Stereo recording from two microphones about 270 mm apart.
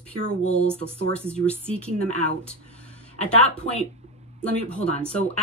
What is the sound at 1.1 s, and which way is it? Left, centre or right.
Speech, centre.